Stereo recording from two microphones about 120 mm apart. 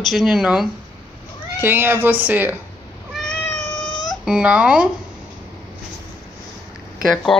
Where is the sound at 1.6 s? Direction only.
20° right (ahead or behind).